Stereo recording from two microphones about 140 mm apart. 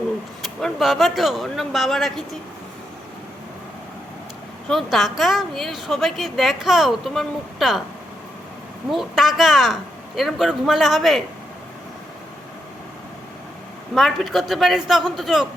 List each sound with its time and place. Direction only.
0.4 s a woman's voice: centre (ahead or behind)
4.7 s a woman's voice: centre (ahead or behind)
8.9 s a woman's voice: centre (ahead or behind)
13.9 s a woman's voice: centre (ahead or behind)